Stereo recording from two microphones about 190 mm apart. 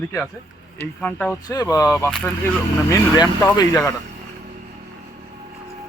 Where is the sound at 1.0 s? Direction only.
5° left (ahead or behind).